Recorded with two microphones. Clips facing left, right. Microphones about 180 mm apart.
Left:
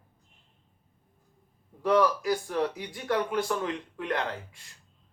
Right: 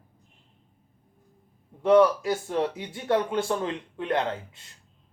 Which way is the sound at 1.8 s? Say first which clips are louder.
Right 5 dB; 25° right (ahead or behind).